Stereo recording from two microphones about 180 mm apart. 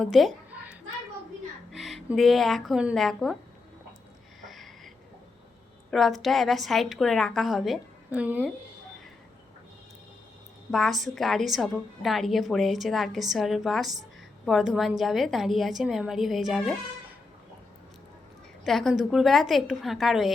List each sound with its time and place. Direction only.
0.0 s a sound: centre (ahead or behind)
1.7 s speech: centre (ahead or behind)
4.4 s a sound: centre (ahead or behind)
5.9 s a woman's voice: centre (ahead or behind)
10.7 s a woman's voice: centre (ahead or behind)
18.6 s a woman's voice: centre (ahead or behind)